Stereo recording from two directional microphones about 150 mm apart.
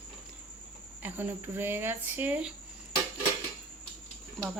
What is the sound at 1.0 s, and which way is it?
Speech, 10° right (ahead or behind).